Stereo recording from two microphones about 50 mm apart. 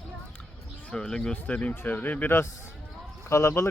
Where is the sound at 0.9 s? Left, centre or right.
Centre.